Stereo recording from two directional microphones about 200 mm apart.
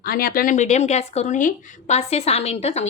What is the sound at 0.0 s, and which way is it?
Speech, 45° left (ahead or behind).